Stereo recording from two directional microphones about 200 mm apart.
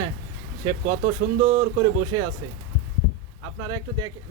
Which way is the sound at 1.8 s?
20° right (ahead or behind).